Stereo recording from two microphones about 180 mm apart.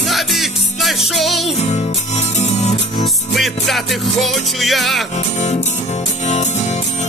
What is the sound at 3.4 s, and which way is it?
Music, centre (ahead or behind).